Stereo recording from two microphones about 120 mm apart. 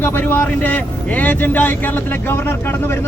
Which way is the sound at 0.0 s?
20° left (ahead or behind).